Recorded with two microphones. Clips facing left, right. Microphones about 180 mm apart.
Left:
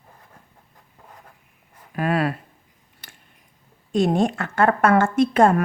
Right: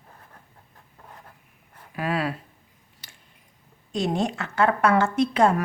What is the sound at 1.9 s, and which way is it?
Speech, 50° left (ahead or behind).